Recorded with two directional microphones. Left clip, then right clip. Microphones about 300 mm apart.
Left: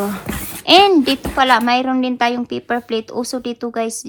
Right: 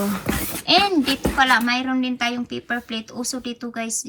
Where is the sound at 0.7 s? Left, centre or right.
Left.